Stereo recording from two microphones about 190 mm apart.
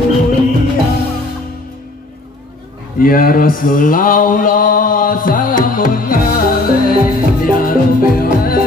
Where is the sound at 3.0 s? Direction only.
50° left (ahead or behind).